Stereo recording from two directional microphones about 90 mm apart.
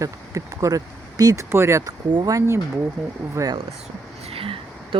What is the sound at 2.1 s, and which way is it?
Speech, 45° right (ahead or behind).